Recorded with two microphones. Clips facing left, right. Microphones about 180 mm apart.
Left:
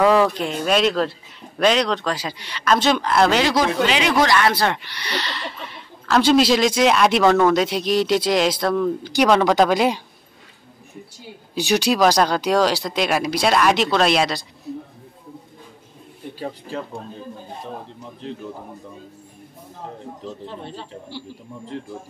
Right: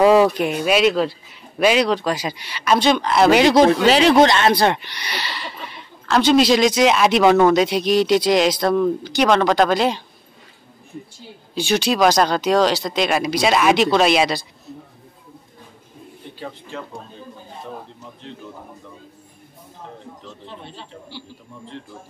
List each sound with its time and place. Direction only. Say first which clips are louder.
0.0 s a man's voice: right 3 dB; 15° right (ahead or behind)
2.8 s speech: right 2 dB; centre (ahead or behind)
3.3 s a man's voice: right 5 dB; 15° right (ahead or behind)
3.5 s speech: right 6 dB; 35° right (ahead or behind); by 10.0 s 10° left (ahead or behind)
11.7 s speech: even; 10° left (ahead or behind)